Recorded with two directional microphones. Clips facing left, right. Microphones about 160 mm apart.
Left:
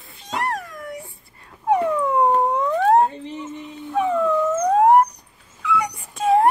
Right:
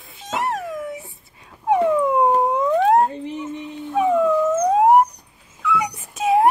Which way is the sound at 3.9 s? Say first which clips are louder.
Right 2 dB; 10° right (ahead or behind).